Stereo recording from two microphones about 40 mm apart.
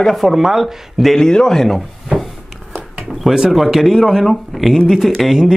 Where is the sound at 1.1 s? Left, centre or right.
Centre.